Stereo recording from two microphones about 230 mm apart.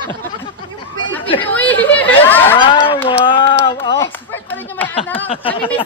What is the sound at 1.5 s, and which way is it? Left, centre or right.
Chatter, centre.